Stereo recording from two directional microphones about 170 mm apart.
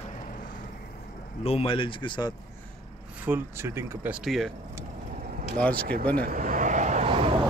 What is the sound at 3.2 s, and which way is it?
Speech, 15° right (ahead or behind).